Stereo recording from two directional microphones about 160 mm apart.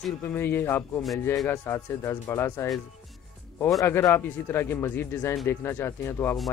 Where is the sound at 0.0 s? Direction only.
10° left (ahead or behind).